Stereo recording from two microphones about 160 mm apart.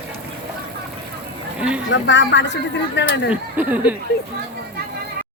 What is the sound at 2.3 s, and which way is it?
Speech, 90° left.